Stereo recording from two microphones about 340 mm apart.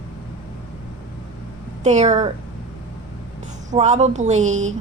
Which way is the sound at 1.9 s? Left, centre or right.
Right.